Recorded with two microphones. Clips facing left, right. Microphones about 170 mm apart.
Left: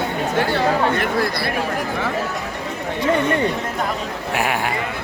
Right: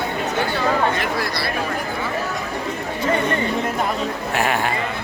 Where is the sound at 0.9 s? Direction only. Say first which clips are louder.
Left 3 dB; 55° left (ahead or behind).